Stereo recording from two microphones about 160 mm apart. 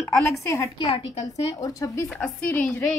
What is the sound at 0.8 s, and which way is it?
Speech, 35° left (ahead or behind).